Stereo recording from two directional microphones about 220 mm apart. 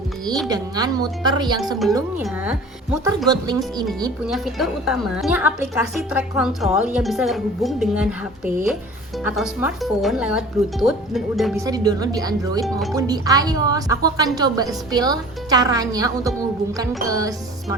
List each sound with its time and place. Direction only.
0.4 s a woman's voice: 15° right (ahead or behind)
2.2 s a woman's voice: 5° right (ahead or behind)
3.2 s a woman's voice: 20° right (ahead or behind)
4.2 s a woman's voice: centre (ahead or behind)
9.2 s a woman's voice: 5° right (ahead or behind)
11.5 s a woman's voice: 15° right (ahead or behind)